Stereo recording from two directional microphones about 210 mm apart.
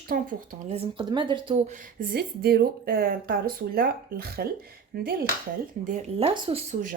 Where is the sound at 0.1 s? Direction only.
40° right (ahead or behind).